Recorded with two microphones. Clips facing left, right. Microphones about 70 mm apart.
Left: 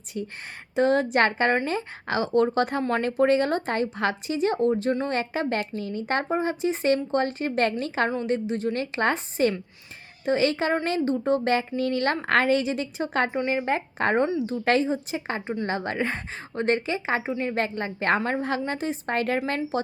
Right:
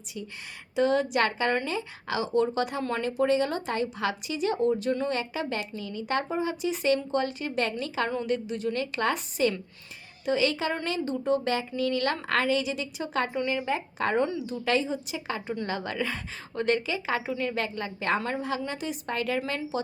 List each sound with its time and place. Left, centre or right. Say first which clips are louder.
0.1 s speech: left 6 dB; left
18.2 s a woman's voice: left 4 dB; left
18.4 s speech: left 4 dB; left